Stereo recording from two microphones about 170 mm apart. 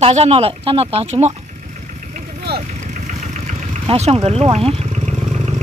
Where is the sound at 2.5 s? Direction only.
70° right (ahead or behind).